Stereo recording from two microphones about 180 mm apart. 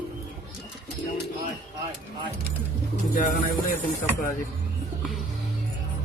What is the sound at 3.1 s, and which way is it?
Speech, 55° left (ahead or behind).